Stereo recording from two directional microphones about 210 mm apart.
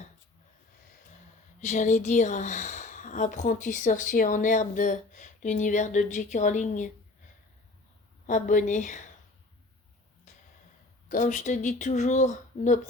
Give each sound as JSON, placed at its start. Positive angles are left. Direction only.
{"t": 1.6, "sound": "speech", "side_deg": 35}
{"t": 8.3, "sound": "speech", "side_deg": 35}
{"t": 11.1, "sound": "speech", "side_deg": 35}